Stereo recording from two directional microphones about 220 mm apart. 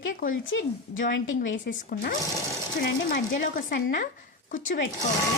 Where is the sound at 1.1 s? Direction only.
60° left (ahead or behind).